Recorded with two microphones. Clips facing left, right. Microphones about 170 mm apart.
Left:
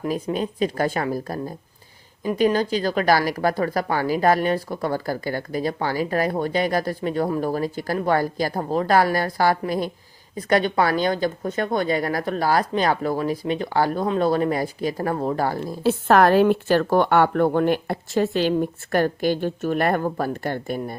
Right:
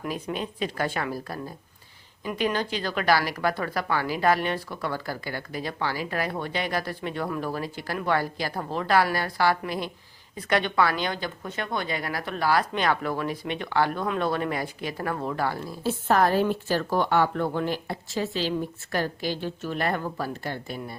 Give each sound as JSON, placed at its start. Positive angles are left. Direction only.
{"t": 0.0, "sound": "a woman's voice", "side_deg": 35}
{"t": 15.8, "sound": "speech", "side_deg": 75}